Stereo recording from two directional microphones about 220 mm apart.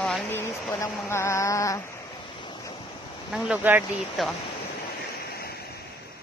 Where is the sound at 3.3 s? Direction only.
5° right (ahead or behind).